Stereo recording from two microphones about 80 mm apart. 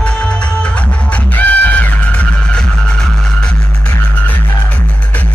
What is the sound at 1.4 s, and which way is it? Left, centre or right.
Music, centre.